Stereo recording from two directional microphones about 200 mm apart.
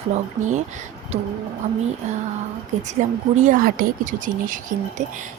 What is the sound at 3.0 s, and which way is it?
Speech, 40° right (ahead or behind).